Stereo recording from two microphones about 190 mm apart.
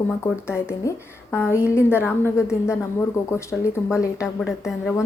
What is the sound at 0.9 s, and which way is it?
A woman's voice, 15° left (ahead or behind).